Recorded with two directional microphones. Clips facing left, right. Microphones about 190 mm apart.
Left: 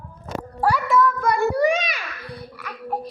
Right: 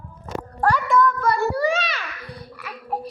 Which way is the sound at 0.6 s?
5° left (ahead or behind).